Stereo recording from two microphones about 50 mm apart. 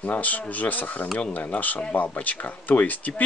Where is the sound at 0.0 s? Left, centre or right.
Left.